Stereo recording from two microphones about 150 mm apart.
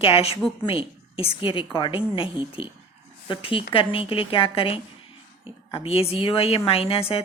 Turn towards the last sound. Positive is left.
turn(degrees=40)  # may be behind; listen again after turning